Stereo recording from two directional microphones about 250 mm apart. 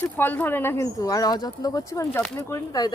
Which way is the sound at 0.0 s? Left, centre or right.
Centre.